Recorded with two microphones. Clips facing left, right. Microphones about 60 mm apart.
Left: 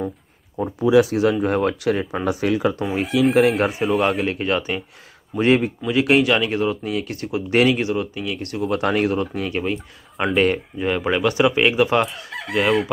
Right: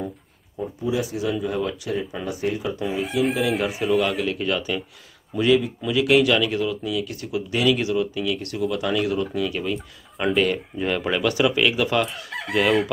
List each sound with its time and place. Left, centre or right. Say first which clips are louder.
0.6 s speech: left 9 dB; left
1.4 s speech: left 6 dB; left
2.2 s speech: left 8 dB; left
3.3 s speech: left 6 dB; left
4.2 s speech: left 3 dB; left
5.3 s speech: left 2 dB; left
5.9 s speech: left 1 dB; left
10.8 s speech: left 2 dB; centre
12.3 s chicken: left 1 dB; centre